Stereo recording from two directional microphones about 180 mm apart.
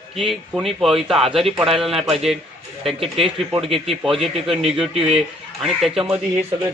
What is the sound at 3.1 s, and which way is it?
A man's voice, centre (ahead or behind).